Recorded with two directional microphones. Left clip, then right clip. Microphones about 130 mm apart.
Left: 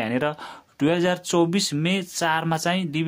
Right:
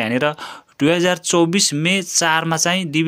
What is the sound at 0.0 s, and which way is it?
Speech, 20° right (ahead or behind).